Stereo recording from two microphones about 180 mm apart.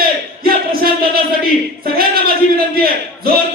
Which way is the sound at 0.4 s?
55° right (ahead or behind).